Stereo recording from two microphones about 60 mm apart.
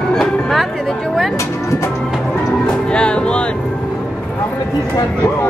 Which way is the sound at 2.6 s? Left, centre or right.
Centre.